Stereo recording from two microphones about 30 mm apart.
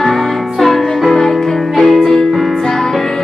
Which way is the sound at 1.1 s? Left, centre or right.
Centre.